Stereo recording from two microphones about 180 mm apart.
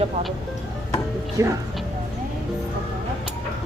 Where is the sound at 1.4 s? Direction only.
15° right (ahead or behind).